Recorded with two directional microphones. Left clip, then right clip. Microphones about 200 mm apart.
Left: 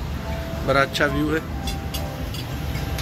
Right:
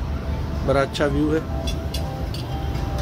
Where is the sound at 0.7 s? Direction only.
10° right (ahead or behind).